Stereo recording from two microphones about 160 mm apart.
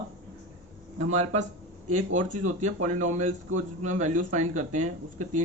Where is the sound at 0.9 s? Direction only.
45° right (ahead or behind).